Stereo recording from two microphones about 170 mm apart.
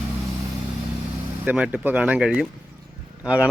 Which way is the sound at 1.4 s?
10° right (ahead or behind).